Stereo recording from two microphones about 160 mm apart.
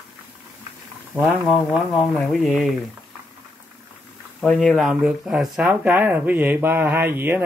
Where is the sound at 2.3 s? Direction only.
Centre (ahead or behind).